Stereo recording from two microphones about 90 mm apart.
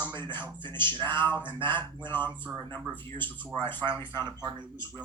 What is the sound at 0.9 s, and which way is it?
Speech, 20° left (ahead or behind).